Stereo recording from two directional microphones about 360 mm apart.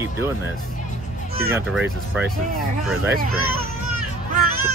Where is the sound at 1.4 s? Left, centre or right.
Centre.